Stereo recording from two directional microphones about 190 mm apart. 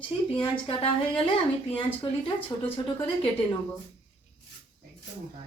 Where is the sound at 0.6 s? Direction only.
30° left (ahead or behind).